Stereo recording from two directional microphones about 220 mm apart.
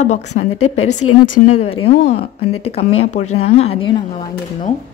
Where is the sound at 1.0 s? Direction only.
90° left.